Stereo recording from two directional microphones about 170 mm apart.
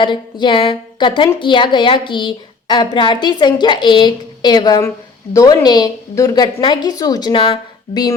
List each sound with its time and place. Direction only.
0.0 s a woman's voice: 25° left (ahead or behind)